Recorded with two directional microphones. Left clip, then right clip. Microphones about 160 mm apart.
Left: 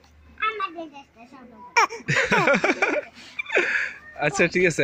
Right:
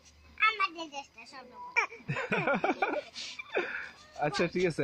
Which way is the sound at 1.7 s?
70° left (ahead or behind).